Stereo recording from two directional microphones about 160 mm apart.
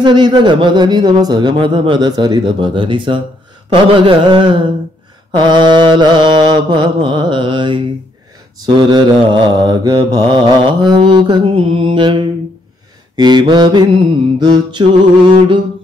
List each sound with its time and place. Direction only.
0.0 s mantra: 25° right (ahead or behind)
3.9 s a sound: 30° right (ahead or behind)
5.3 s mantra: 30° right (ahead or behind)